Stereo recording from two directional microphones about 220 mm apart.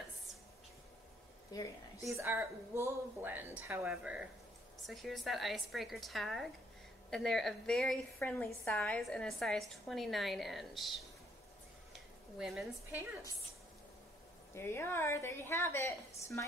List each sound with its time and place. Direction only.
1.5 s a woman's voice: 15° left (ahead or behind)
2.0 s a woman's voice: 15° right (ahead or behind)
14.5 s a woman's voice: 10° left (ahead or behind)